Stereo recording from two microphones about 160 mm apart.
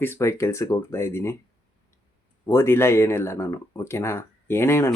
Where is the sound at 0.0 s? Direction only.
15° left (ahead or behind).